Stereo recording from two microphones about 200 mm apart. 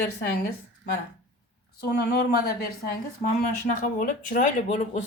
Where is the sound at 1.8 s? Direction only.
55° left (ahead or behind).